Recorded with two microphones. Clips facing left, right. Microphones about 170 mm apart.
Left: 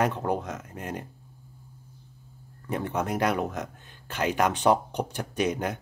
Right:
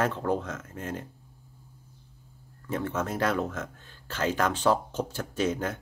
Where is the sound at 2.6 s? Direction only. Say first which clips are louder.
Left 1 dB; 15° left (ahead or behind).